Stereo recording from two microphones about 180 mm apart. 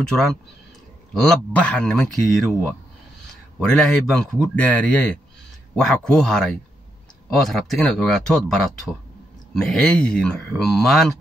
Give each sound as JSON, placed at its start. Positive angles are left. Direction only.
{"t": 0.0, "sound": "speech", "side_deg": 0}
{"t": 3.5, "sound": "a man's voice", "side_deg": 5}